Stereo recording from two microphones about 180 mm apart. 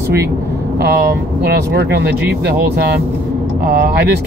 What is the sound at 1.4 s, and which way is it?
Speech, 65° right (ahead or behind).